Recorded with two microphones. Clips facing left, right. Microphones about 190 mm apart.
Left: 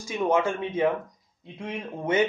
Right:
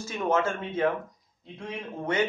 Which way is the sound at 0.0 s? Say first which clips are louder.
Left 2 dB; 10° left (ahead or behind).